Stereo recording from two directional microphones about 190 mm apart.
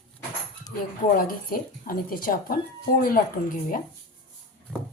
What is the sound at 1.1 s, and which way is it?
Speech, 50° left (ahead or behind).